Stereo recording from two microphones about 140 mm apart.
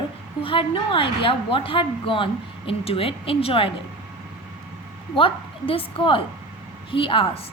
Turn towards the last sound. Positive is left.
turn(degrees=40)  # may be behind; listen again after turning